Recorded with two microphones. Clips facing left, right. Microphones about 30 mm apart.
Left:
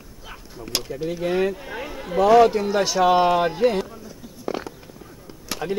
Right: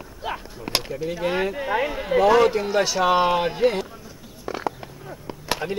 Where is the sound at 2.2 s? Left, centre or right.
Centre.